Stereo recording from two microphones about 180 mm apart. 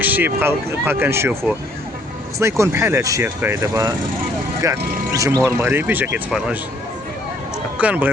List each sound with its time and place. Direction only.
0.0 s speech: 10° right (ahead or behind)
2.4 s speech: 15° right (ahead or behind)
7.8 s speech: 10° right (ahead or behind)